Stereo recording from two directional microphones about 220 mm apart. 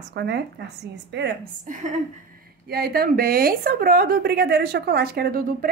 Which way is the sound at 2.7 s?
45° right (ahead or behind).